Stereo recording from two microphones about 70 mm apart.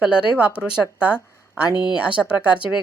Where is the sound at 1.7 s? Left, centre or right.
Left.